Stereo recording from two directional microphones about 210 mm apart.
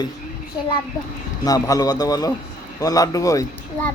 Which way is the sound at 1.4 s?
15° left (ahead or behind).